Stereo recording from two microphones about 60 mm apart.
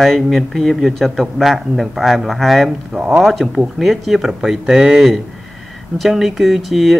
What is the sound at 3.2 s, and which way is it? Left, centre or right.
Speech, centre.